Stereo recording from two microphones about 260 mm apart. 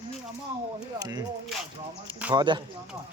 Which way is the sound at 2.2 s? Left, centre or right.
Centre.